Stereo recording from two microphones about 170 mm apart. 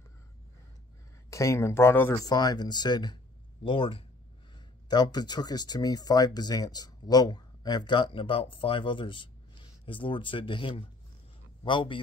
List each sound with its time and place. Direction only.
1.3 s speech: 15° left (ahead or behind)